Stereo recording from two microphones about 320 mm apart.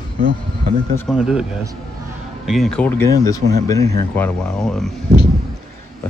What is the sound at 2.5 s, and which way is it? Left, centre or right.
Speech, centre.